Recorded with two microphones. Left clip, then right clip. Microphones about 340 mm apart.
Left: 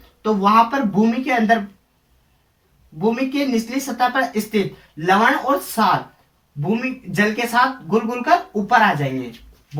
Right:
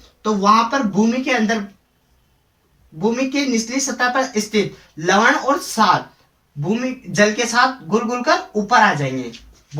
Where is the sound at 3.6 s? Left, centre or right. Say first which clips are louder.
Right 1 dB; centre.